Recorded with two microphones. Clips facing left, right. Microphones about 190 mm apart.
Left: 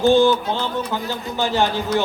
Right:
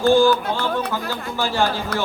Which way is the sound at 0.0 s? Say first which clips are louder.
Left 1 dB; 20° left (ahead or behind).